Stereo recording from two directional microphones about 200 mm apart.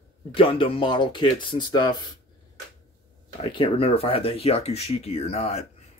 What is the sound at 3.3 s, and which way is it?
Speech, 25° left (ahead or behind).